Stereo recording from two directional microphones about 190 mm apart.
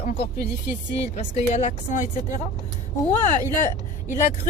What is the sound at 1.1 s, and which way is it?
Speech, 40° left (ahead or behind).